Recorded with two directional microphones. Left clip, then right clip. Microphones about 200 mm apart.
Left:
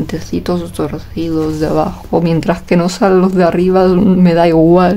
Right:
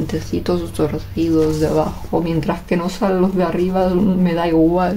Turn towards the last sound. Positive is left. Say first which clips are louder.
# left 7 dB
turn(degrees=45)  # may be behind; listen again after turning